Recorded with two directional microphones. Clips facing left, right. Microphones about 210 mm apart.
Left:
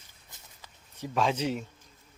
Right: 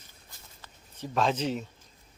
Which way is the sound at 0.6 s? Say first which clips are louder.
Left 1 dB; 10° left (ahead or behind).